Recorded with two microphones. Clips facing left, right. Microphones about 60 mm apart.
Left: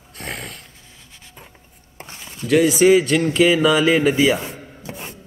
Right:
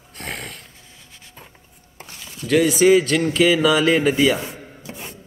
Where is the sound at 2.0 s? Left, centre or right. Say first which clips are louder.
Left 2 dB; left.